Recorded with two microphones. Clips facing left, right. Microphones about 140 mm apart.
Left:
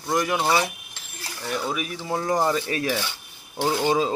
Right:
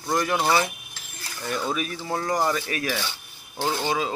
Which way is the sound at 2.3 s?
25° left (ahead or behind).